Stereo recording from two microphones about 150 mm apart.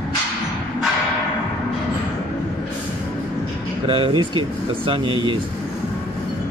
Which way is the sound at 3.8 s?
35° right (ahead or behind).